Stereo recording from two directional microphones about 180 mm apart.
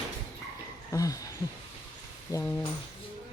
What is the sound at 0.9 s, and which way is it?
Speech, 20° left (ahead or behind).